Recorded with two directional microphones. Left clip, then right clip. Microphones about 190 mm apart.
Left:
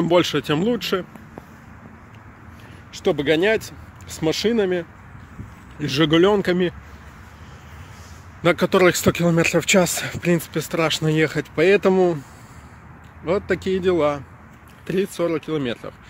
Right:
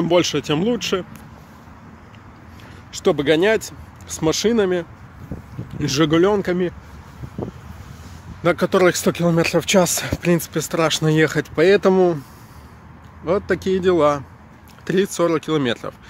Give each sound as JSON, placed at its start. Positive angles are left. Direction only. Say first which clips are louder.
{"t": 0.0, "sound": "speech", "louder": "right 1 dB", "side_deg": 0}
{"t": 2.9, "sound": "speech", "louder": "right 2 dB", "side_deg": -10}
{"t": 6.0, "sound": "speech", "louder": "left 1 dB", "side_deg": 10}
{"t": 8.4, "sound": "speech", "louder": "even", "side_deg": 10}
{"t": 13.2, "sound": "speech", "louder": "right 2 dB", "side_deg": -5}